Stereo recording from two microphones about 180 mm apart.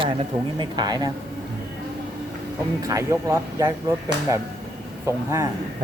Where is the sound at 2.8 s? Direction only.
15° right (ahead or behind).